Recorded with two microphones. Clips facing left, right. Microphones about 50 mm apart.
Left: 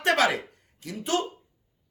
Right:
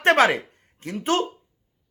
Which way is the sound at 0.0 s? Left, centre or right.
Right.